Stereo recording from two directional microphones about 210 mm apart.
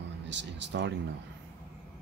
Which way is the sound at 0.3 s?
60° right (ahead or behind).